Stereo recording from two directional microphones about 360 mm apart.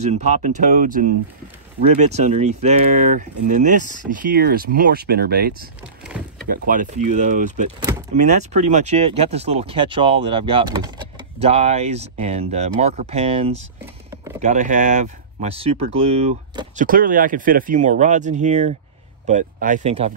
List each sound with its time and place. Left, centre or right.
0.0 s speech: centre
6.1 s door: centre
6.5 s speech: right